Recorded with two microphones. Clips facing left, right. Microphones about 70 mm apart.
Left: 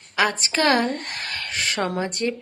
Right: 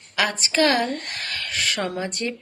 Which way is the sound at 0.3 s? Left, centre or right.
Left.